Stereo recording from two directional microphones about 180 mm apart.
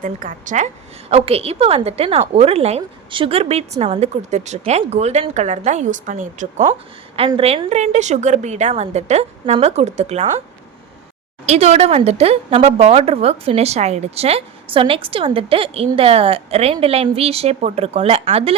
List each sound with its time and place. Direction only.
0.0 s a woman's voice: 50° right (ahead or behind)
7.2 s a woman's voice: 30° right (ahead or behind)
11.4 s a woman's voice: 35° right (ahead or behind)